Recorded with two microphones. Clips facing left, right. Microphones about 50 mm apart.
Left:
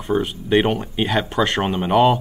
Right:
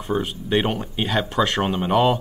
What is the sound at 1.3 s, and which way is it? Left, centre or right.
Speech, left.